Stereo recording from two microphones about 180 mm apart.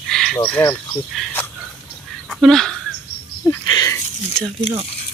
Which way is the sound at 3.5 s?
20° left (ahead or behind).